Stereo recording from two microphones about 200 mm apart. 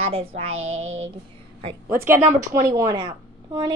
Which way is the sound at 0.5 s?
90° right.